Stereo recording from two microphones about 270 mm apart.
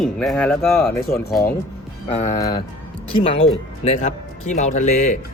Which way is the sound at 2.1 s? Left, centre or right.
Left.